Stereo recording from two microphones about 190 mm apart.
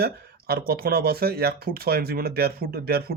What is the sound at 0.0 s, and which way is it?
A man's voice, 55° right (ahead or behind).